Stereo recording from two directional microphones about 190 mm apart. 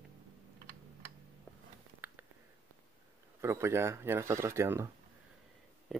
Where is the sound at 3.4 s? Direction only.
15° right (ahead or behind).